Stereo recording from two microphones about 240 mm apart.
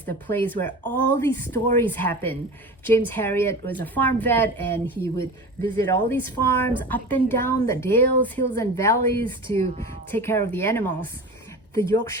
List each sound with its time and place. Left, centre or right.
0.0 s a woman's voice: centre
9.2 s speech: right
10.1 s a woman's voice: centre